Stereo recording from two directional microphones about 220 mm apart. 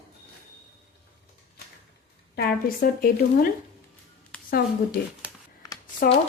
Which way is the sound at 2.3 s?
45° left (ahead or behind).